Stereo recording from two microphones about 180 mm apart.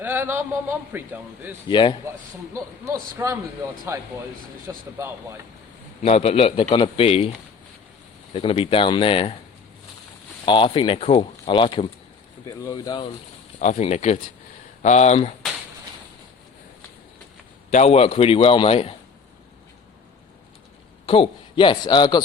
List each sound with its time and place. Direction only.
0.0 s a man's voice: 10° right (ahead or behind)
1.6 s speech: 25° left (ahead or behind)
2.5 s a man's voice: 15° right (ahead or behind)
6.0 s a man's voice: 35° left (ahead or behind)
10.4 s speech: 25° left (ahead or behind)
13.6 s a man's voice: 40° left (ahead or behind)
17.7 s a man's voice: 40° left (ahead or behind)
21.1 s speech: 30° left (ahead or behind)